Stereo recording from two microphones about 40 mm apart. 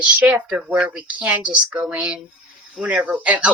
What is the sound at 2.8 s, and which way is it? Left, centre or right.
Speech, right.